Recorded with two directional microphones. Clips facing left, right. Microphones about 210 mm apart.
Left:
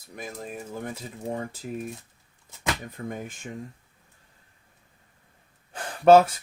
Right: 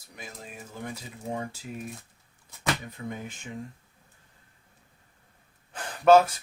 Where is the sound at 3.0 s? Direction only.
45° left (ahead or behind).